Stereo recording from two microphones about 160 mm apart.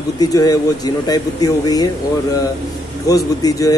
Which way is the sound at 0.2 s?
25° left (ahead or behind).